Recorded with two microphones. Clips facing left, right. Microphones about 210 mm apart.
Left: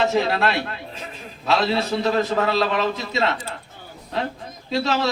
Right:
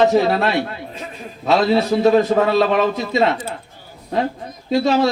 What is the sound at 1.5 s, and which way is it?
A man's voice, 50° right (ahead or behind).